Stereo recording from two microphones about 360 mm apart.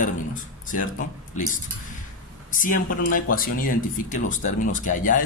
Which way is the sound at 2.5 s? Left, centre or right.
Left.